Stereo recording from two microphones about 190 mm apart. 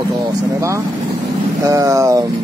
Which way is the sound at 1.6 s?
15° right (ahead or behind).